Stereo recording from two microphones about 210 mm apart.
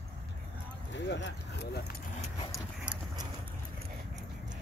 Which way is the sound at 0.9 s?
60° left (ahead or behind).